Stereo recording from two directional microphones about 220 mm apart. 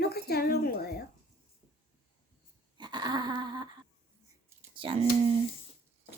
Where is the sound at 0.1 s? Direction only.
45° left (ahead or behind).